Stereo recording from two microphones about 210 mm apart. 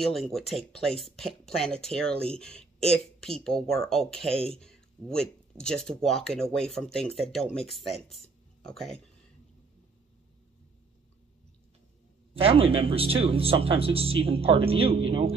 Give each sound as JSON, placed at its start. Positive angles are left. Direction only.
{"t": 0.0, "sound": "speech", "side_deg": 0}
{"t": 12.4, "sound": "speech", "side_deg": -25}